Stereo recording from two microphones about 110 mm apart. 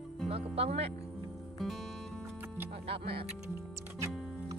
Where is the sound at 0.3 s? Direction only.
65° right (ahead or behind).